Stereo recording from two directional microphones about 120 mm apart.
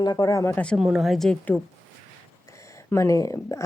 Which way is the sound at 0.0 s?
35° left (ahead or behind).